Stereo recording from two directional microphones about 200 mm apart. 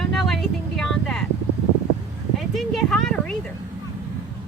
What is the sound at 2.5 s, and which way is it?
Speech, centre (ahead or behind).